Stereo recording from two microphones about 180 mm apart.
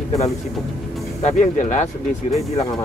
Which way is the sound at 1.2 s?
40° left (ahead or behind).